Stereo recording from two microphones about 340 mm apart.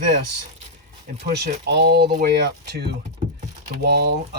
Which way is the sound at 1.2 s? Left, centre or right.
Right.